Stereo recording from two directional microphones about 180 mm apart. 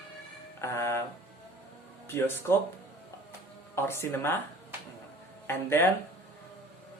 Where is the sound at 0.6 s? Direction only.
15° left (ahead or behind).